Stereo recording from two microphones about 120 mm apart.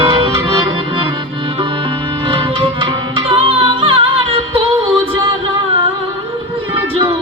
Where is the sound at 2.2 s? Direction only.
50° right (ahead or behind).